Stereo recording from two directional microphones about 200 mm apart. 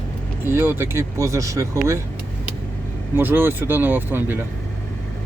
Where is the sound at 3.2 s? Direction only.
10° right (ahead or behind).